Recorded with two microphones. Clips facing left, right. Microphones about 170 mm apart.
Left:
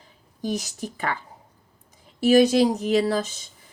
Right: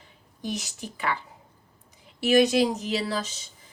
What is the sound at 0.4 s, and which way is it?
Speech, 45° left (ahead or behind).